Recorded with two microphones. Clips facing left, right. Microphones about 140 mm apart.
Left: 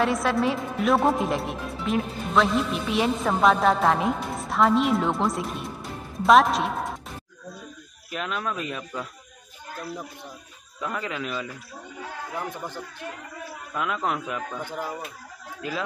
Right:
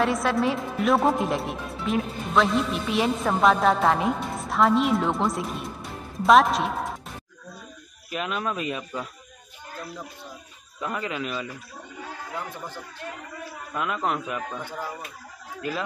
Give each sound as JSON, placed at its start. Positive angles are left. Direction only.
{"t": 0.0, "sound": "a woman's voice", "side_deg": 0}
{"t": 8.1, "sound": "speech", "side_deg": -5}
{"t": 10.8, "sound": "a woman's voice", "side_deg": -5}
{"t": 12.4, "sound": "speech", "side_deg": 15}
{"t": 13.7, "sound": "a woman's voice", "side_deg": 0}
{"t": 14.6, "sound": "speech", "side_deg": 15}